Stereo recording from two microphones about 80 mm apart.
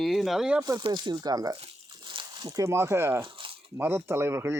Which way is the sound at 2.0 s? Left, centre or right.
Right.